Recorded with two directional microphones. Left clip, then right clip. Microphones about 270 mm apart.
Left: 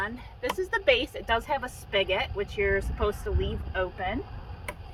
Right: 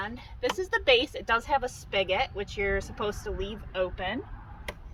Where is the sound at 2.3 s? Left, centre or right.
Centre.